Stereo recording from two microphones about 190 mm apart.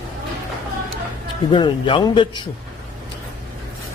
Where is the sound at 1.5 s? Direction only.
25° left (ahead or behind).